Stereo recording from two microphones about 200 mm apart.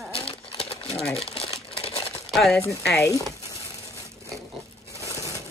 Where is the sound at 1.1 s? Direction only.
30° left (ahead or behind).